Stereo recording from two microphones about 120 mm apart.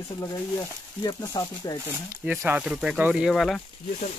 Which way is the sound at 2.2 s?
15° right (ahead or behind).